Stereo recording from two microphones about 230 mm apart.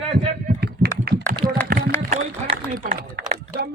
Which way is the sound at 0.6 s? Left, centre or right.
Right.